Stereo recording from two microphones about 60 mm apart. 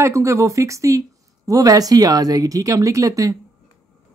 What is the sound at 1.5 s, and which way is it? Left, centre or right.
Speech, right.